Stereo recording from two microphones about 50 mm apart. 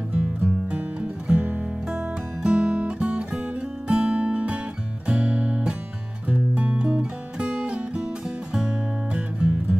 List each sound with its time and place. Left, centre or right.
0.1 s music: right
2.4 s guitar: centre
3.8 s music: right